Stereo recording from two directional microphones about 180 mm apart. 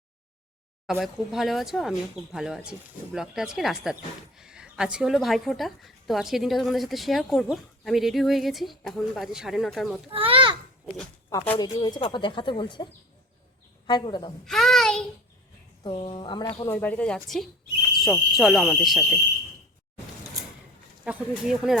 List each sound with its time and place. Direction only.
0.9 s a woman's voice: centre (ahead or behind)
10.1 s children playing: 30° right (ahead or behind)
11.3 s speech: 20° left (ahead or behind)
14.4 s child singing: centre (ahead or behind)
15.8 s speech: 30° left (ahead or behind)
16.6 s a woman's voice: 10° left (ahead or behind)
21.0 s a woman's voice: 5° right (ahead or behind)